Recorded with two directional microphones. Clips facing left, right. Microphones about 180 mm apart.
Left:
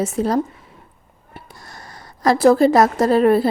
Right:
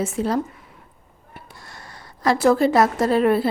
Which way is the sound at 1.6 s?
40° left (ahead or behind).